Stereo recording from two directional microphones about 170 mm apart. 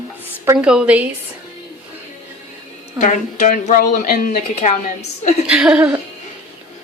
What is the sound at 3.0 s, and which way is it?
A woman's voice, 45° left (ahead or behind).